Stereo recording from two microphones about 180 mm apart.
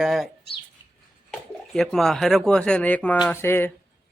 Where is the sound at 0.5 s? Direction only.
65° left (ahead or behind).